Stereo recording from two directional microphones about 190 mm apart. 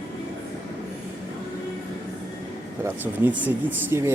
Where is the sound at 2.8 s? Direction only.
10° right (ahead or behind).